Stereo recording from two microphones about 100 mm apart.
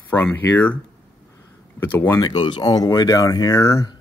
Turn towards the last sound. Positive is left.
turn(degrees=35)  # may be behind; listen again after turning